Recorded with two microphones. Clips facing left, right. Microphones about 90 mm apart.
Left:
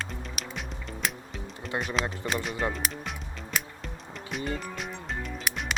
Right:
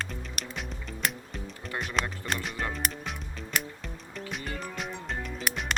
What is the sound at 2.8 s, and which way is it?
Music, centre (ahead or behind).